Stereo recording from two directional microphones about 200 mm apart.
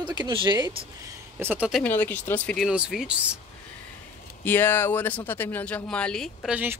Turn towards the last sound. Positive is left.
turn(degrees=-5)  # may be behind; listen again after turning